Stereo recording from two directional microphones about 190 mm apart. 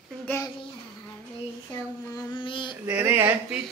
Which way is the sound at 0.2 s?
10° left (ahead or behind).